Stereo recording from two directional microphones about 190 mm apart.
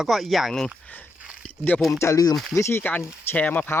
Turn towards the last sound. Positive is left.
turn(degrees=10)  # may be behind; listen again after turning